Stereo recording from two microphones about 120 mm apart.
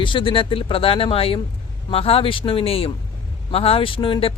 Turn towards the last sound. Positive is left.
turn(degrees=50)  # may be behind; listen again after turning